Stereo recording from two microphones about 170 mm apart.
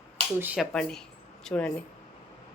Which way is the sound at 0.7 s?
5° left (ahead or behind).